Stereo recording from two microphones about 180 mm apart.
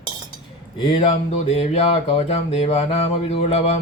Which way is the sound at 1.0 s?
40° left (ahead or behind).